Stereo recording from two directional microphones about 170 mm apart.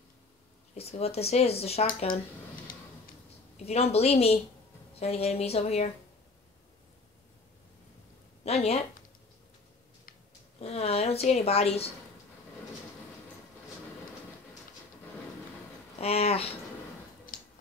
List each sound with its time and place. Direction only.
0.7 s speech: 35° left (ahead or behind)
1.9 s speech: 50° left (ahead or behind)
3.5 s speech: 40° left (ahead or behind)
8.5 s speech: 40° left (ahead or behind)
10.6 s speech: 40° left (ahead or behind)
16.0 s speech: 35° left (ahead or behind)